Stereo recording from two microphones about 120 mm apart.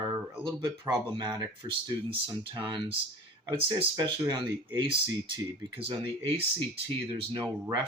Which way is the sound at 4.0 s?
35° right (ahead or behind).